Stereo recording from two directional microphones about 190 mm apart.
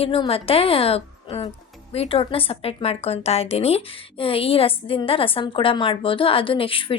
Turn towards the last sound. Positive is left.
turn(degrees=30)  # may be behind; listen again after turning